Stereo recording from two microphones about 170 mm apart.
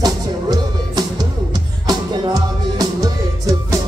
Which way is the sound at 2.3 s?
20° right (ahead or behind).